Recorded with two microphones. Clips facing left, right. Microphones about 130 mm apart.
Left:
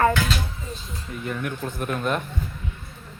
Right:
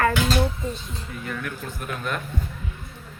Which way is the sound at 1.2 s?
25° left (ahead or behind).